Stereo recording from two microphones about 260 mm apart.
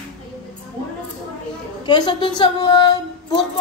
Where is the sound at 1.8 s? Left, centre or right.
Centre.